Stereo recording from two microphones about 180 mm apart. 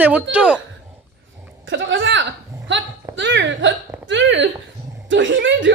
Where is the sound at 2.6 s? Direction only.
90° right.